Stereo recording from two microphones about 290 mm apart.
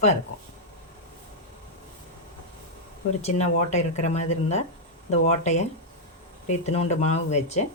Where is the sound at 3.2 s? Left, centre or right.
Left.